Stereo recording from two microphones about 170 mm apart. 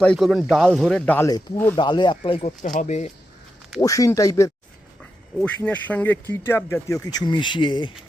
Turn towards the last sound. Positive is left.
turn(degrees=30)  # may be behind; listen again after turning